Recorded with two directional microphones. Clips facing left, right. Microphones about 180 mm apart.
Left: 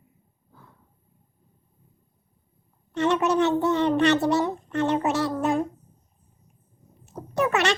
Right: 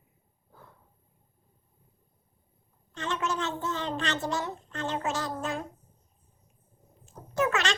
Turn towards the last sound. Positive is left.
turn(degrees=65)  # may be behind; listen again after turning